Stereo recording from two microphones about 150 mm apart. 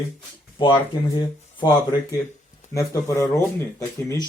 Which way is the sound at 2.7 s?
20° left (ahead or behind).